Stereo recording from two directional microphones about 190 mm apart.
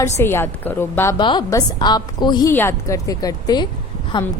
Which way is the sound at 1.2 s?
25° left (ahead or behind).